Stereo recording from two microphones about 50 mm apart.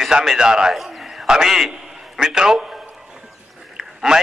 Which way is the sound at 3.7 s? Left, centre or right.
Centre.